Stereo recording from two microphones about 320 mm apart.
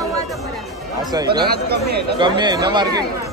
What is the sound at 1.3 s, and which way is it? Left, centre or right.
Speech, right.